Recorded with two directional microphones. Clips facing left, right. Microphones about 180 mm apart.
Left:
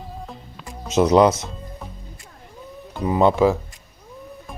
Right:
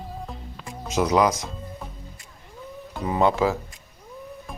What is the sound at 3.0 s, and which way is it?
Speech, 15° left (ahead or behind).